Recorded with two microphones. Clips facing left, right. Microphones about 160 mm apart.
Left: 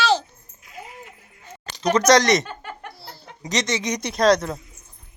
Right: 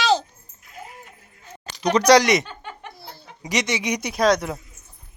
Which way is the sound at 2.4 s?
5° left (ahead or behind).